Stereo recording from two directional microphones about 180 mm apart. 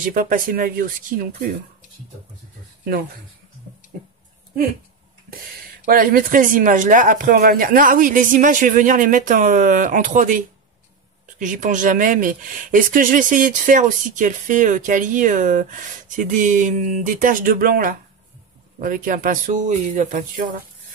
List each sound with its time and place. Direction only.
0.0 s speech: 50° right (ahead or behind)
3.9 s speech: 55° right (ahead or behind)
5.9 s speech: 50° right (ahead or behind)